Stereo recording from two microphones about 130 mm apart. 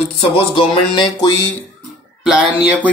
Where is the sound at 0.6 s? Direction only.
35° left (ahead or behind).